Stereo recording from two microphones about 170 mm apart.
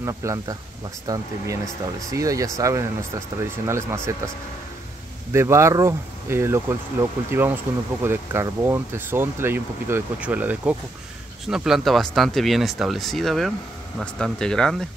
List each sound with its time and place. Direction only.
0.0 s speech: 15° right (ahead or behind)
5.3 s speech: 15° right (ahead or behind); by 14.9 s 5° left (ahead or behind)